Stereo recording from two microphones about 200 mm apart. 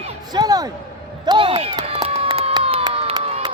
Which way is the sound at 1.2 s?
25° right (ahead or behind).